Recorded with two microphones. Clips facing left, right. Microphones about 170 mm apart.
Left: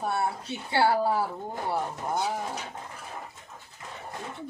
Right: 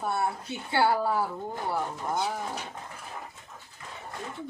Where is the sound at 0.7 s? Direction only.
30° left (ahead or behind).